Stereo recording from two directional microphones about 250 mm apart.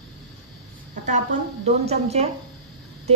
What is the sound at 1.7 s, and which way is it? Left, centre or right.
Speech, right.